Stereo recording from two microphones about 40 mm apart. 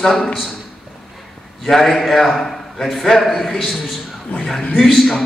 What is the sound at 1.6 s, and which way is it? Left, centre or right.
A man's voice, centre.